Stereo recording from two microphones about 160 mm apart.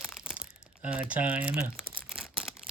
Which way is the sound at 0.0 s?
15° left (ahead or behind).